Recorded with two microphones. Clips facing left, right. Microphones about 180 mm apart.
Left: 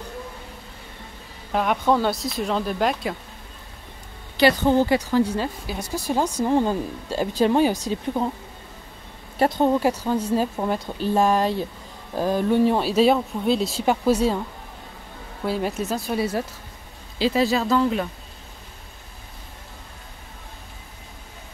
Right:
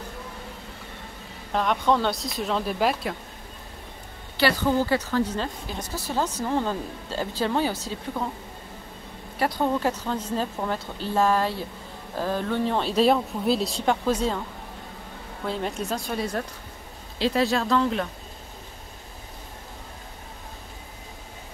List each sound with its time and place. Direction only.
1.5 s speech: 5° left (ahead or behind)
4.4 s speech: 20° left (ahead or behind)
9.4 s a woman's voice: 25° left (ahead or behind)
9.8 s speech: 10° left (ahead or behind)
15.4 s speech: 5° left (ahead or behind)